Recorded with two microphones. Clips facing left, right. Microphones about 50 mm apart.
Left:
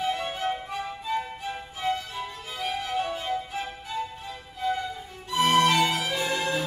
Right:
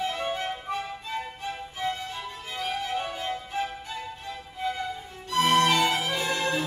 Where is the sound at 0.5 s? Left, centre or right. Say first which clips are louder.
Left 1 dB; centre.